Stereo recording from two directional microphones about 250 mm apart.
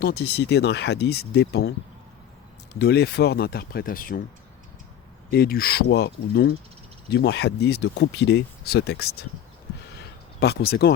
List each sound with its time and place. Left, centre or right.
0.0 s speech: left
2.7 s speech: left
5.3 s speech: left
10.4 s speech: left